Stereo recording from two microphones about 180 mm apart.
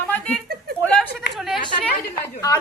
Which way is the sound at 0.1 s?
5° left (ahead or behind).